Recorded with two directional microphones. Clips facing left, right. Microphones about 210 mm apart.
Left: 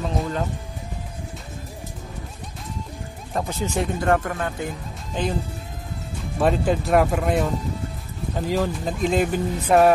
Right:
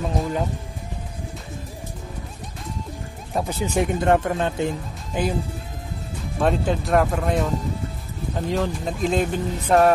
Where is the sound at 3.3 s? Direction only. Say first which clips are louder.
Right 2 dB; 10° right (ahead or behind).